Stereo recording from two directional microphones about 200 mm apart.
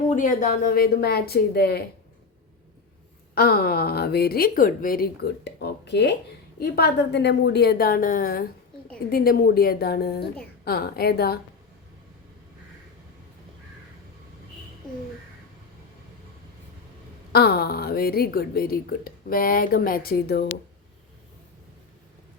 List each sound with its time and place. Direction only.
0.1 s a woman's voice: 40° left (ahead or behind)
3.3 s a woman's voice: 50° left (ahead or behind)
17.3 s a woman's voice: 50° left (ahead or behind)